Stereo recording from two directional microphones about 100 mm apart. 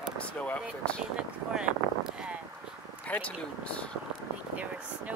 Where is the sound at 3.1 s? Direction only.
15° left (ahead or behind).